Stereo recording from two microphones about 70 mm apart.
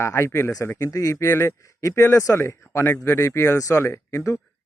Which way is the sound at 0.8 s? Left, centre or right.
Left.